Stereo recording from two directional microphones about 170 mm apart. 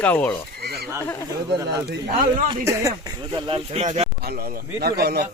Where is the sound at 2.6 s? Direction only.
20° right (ahead or behind); by 4.1 s 40° right (ahead or behind).